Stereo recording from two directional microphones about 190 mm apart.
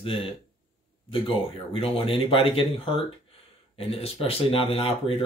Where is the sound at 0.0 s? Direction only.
25° left (ahead or behind).